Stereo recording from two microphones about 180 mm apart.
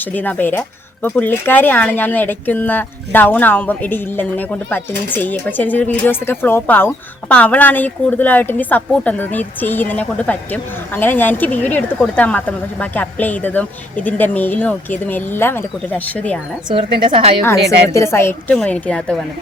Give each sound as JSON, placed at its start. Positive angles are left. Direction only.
{"t": 0.0, "sound": "speech", "side_deg": 10}
{"t": 16.6, "sound": "speech", "side_deg": -25}
{"t": 17.4, "sound": "speech", "side_deg": 15}